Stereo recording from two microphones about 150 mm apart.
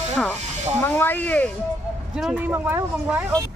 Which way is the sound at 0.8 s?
15° left (ahead or behind).